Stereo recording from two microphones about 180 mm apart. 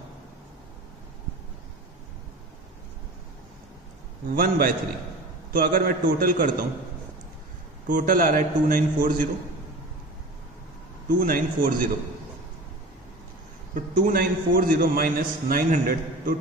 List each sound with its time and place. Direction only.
4.3 s a man's voice: 55° right (ahead or behind)
7.9 s a man's voice: 50° right (ahead or behind)
11.1 s a man's voice: 50° right (ahead or behind)
13.7 s a man's voice: 50° right (ahead or behind)